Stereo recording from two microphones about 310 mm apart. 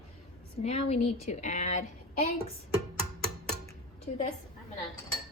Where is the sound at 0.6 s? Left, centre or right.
Left.